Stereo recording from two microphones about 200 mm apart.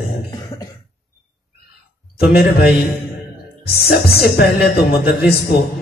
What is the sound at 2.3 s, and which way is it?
Speech, 50° left (ahead or behind).